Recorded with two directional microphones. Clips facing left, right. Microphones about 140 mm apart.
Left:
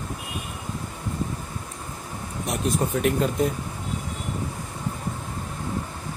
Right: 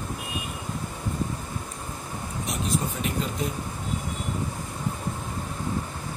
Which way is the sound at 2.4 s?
55° left (ahead or behind).